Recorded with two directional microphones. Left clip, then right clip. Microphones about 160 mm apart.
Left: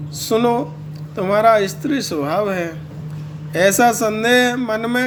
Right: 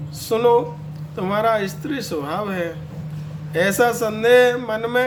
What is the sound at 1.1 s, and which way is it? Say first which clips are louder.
Music: left 6 dB; 30° left (ahead or behind).